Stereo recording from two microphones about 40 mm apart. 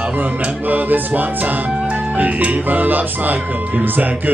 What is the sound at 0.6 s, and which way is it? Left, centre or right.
Speech, right.